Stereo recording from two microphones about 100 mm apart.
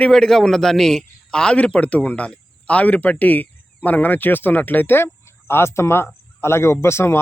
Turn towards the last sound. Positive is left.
turn(degrees=25)  # may be behind; listen again after turning